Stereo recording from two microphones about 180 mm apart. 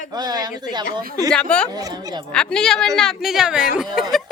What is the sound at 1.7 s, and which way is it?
Speech, 20° right (ahead or behind).